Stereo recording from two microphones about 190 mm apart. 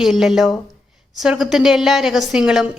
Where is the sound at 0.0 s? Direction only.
Centre (ahead or behind).